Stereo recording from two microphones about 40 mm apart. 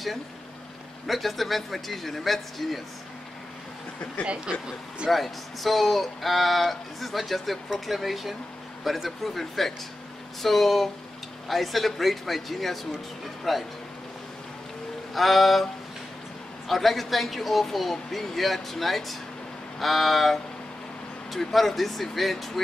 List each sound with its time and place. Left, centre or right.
1.0 s speech: centre
4.3 s speech: right
5.1 s speech: centre
15.1 s speech: centre
16.6 s speech: centre